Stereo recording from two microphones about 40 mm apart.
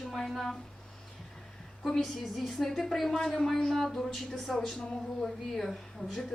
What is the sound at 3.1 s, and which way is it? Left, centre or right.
A woman's voice, centre.